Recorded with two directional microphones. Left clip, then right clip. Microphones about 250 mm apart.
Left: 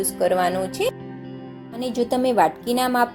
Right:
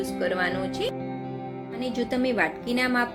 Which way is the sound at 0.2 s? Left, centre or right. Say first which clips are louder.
Left 7 dB; centre.